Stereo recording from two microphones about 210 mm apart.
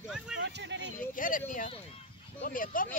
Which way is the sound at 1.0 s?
40° left (ahead or behind).